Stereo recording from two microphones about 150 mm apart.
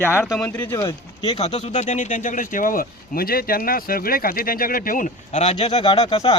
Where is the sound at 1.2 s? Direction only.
45° left (ahead or behind).